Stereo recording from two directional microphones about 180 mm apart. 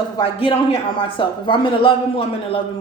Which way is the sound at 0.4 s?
30° left (ahead or behind).